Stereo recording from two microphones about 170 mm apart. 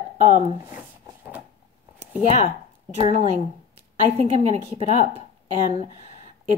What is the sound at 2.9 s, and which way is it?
A woman's voice, 35° right (ahead or behind).